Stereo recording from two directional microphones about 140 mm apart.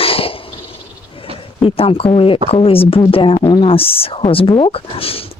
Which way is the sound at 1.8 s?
40° left (ahead or behind).